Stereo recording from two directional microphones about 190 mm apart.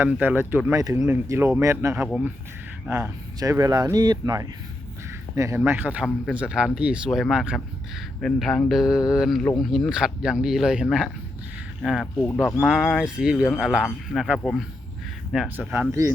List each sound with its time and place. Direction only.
0.0 s speech: 10° right (ahead or behind)